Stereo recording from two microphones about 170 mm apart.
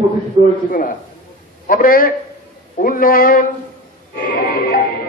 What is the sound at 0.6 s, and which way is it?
A man's voice, 55° left (ahead or behind).